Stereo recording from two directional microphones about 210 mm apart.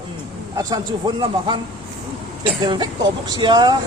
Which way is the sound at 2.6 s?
20° right (ahead or behind).